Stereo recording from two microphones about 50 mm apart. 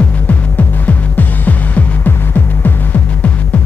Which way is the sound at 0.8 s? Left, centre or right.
Left.